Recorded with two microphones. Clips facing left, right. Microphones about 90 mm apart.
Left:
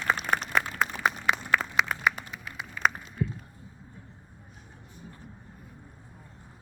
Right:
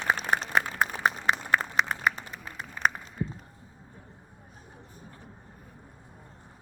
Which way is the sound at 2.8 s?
30° right (ahead or behind).